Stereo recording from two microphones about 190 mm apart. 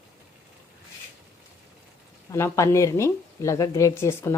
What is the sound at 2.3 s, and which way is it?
A woman's voice, 15° left (ahead or behind).